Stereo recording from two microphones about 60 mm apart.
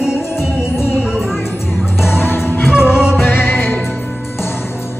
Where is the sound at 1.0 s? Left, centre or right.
Centre.